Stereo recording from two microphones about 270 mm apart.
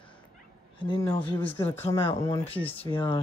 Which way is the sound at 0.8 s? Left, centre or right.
Centre.